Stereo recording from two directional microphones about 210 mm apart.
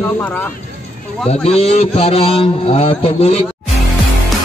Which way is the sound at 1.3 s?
30° left (ahead or behind).